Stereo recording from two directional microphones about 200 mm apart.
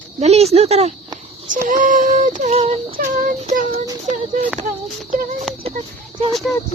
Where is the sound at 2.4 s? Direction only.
30° right (ahead or behind).